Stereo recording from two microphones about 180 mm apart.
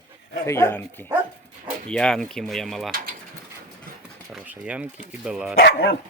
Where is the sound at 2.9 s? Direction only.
55° right (ahead or behind).